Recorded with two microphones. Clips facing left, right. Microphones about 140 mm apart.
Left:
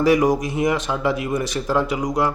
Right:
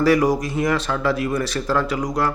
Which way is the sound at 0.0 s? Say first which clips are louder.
Even; 20° left (ahead or behind).